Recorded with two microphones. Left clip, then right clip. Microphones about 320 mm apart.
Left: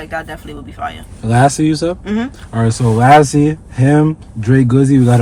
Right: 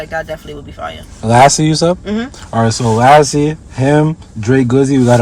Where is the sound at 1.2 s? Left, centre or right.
Centre.